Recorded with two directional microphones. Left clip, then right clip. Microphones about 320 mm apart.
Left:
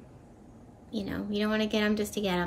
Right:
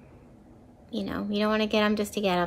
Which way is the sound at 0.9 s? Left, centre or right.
Centre.